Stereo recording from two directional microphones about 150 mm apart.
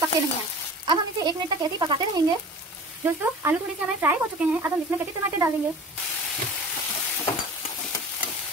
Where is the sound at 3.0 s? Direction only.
15° right (ahead or behind).